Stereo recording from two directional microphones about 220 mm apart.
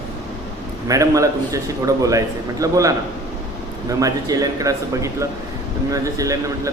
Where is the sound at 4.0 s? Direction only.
15° right (ahead or behind).